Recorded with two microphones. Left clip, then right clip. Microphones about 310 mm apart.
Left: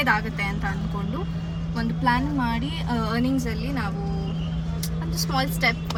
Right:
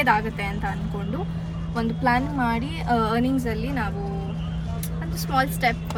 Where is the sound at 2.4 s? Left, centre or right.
Centre.